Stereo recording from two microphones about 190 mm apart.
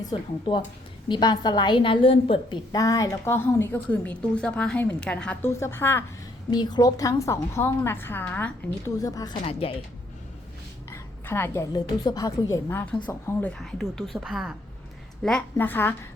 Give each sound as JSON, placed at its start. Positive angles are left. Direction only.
{"t": 0.0, "sound": "a woman's voice", "side_deg": 25}
{"t": 6.5, "sound": "a woman's voice", "side_deg": 20}
{"t": 9.0, "sound": "a woman's voice", "side_deg": 20}
{"t": 9.4, "sound": "a woman's voice", "side_deg": 30}
{"t": 10.9, "sound": "a woman's voice", "side_deg": 10}